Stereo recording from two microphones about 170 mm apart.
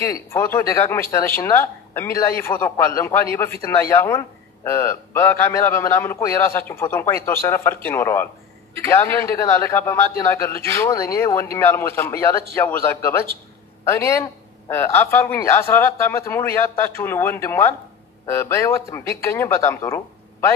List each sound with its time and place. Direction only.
0.0 s a man's voice: 15° left (ahead or behind)